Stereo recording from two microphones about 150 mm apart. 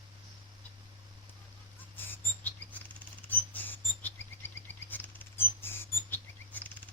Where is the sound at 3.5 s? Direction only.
10° left (ahead or behind).